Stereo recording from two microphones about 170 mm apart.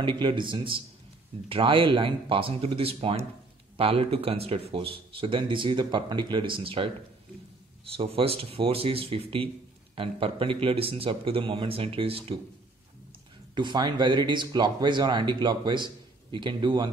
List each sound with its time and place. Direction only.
0.0 s speech: 30° right (ahead or behind)
8.0 s speech: 35° right (ahead or behind)
13.6 s speech: 25° right (ahead or behind)